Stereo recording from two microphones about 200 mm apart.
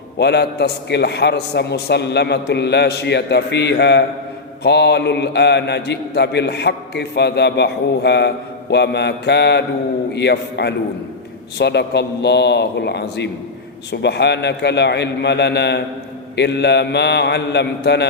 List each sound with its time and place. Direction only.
0.2 s a man's voice: 55° left (ahead or behind)